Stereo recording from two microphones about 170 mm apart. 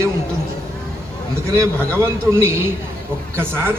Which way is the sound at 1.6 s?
15° right (ahead or behind).